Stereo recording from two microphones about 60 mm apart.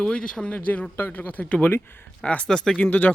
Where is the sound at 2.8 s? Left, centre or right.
Left.